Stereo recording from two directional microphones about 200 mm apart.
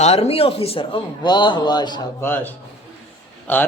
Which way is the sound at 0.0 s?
30° left (ahead or behind).